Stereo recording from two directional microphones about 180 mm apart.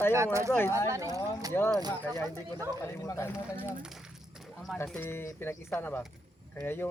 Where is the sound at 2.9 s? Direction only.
15° left (ahead or behind).